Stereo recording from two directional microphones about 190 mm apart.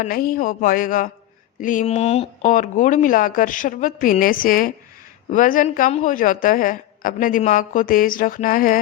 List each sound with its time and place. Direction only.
0.0 s a woman's voice: 50° left (ahead or behind)